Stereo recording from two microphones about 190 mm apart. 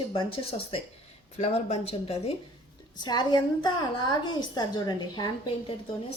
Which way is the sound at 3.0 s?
20° left (ahead or behind).